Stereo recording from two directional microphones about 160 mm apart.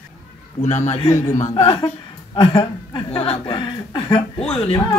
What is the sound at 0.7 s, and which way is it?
Speech, 45° left (ahead or behind).